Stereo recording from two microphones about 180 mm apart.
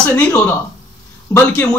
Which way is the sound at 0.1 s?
15° left (ahead or behind).